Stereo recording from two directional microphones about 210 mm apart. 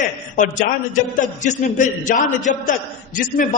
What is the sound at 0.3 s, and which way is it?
A man's voice, 40° left (ahead or behind).